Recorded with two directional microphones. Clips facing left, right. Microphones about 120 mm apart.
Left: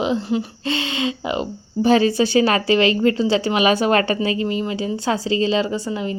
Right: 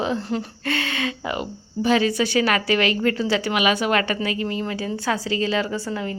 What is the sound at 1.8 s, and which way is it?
Speech, 35° left (ahead or behind).